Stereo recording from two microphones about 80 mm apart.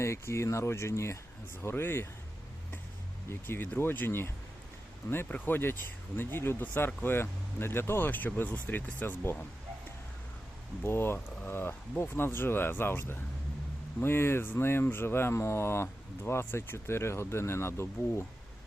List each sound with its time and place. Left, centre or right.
0.0 s speech: left
3.2 s speech: left
5.3 s speech: left
10.8 s speech: left